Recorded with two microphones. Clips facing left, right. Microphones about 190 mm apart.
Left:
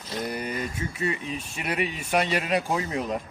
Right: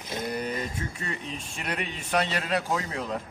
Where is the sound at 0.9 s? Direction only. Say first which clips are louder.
Left 6 dB; 10° left (ahead or behind).